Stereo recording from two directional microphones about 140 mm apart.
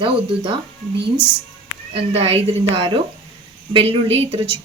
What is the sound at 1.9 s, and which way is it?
A woman's voice, 45° right (ahead or behind).